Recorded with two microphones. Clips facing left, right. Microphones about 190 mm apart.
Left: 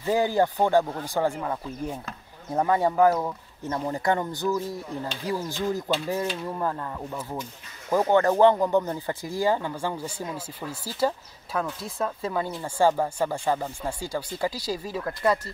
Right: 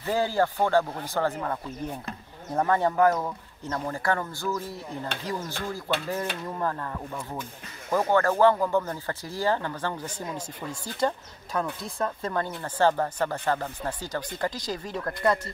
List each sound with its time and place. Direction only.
0.0 s speech: 15° left (ahead or behind)